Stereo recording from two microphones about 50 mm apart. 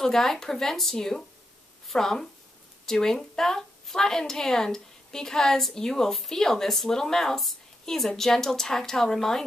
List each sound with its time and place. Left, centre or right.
0.0 s a woman's voice: centre